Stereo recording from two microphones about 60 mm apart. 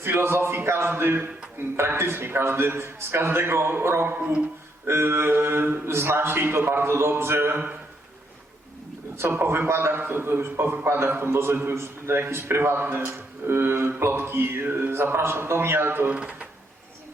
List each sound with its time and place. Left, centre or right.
0.0 s a man's voice: right
9.1 s a man's voice: right
16.1 s speech: centre